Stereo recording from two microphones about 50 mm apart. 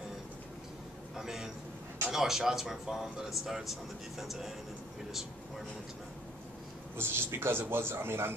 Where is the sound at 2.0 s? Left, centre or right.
Centre.